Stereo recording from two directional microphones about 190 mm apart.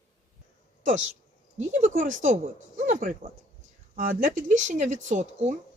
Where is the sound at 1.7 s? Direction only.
40° right (ahead or behind).